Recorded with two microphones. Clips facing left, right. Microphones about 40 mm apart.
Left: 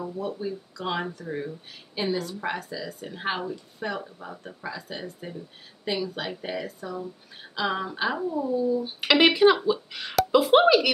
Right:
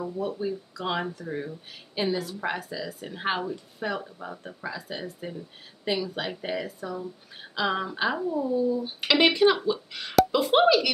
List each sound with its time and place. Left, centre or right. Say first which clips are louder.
0.0 s speech: right 1 dB; centre